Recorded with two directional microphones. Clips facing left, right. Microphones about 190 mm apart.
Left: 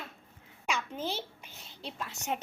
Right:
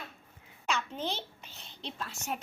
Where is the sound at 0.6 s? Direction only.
10° left (ahead or behind).